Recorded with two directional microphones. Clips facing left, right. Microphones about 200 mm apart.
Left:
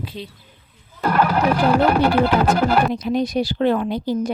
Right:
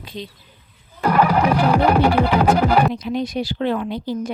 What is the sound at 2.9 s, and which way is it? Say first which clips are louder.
Speech: left 3 dB; 40° left (ahead or behind).